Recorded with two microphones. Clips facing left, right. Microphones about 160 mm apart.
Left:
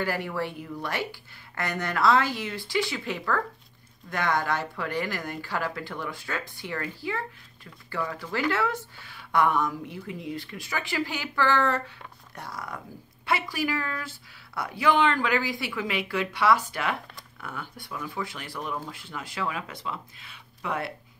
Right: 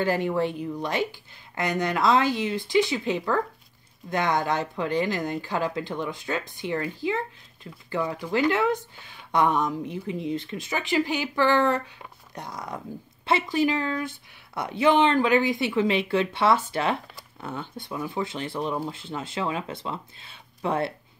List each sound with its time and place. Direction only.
0.0 s speech: 20° right (ahead or behind)